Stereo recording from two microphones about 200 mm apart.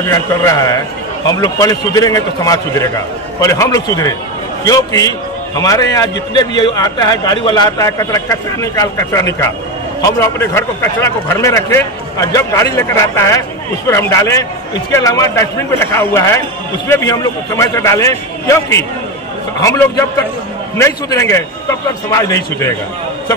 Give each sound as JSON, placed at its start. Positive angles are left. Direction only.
{"t": 0.0, "sound": "a man's voice", "side_deg": 15}